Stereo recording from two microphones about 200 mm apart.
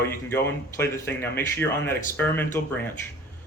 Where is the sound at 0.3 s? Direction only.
10° left (ahead or behind).